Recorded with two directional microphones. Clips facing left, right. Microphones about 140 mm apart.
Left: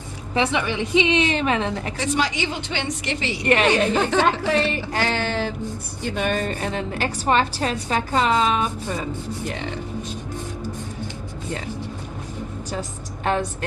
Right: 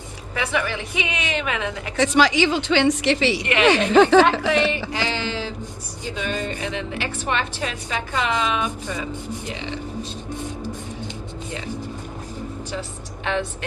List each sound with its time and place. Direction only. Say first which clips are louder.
0.3 s a woman's voice: left 3 dB; 25° left (ahead or behind)
2.0 s a woman's voice: right 8 dB; 90° right
3.4 s a woman's voice: left 6 dB; 40° left (ahead or behind)
3.7 s a woman's voice: right 5 dB; 90° right
4.9 s music: left 2 dB; 50° left (ahead or behind)
6.1 s a woman's voice: left 3 dB; 55° left (ahead or behind); by 9.0 s 40° left (ahead or behind)
9.5 s speech: even; 50° left (ahead or behind)
13.2 s speech: left 2 dB; 45° left (ahead or behind)